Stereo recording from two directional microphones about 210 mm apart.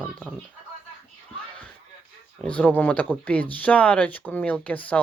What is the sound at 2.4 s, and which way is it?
Speech, 5° left (ahead or behind).